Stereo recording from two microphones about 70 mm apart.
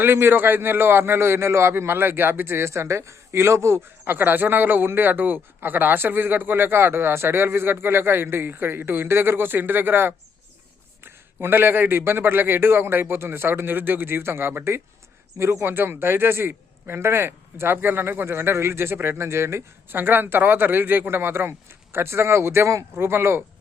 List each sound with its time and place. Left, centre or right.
0.0 s a man's voice: right
4.0 s a man's voice: right